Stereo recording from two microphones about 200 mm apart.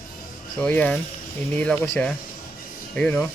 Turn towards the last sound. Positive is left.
turn(degrees=10)  # may be behind; listen again after turning